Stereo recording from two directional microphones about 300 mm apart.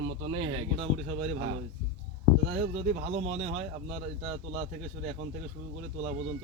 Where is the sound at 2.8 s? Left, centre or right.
Right.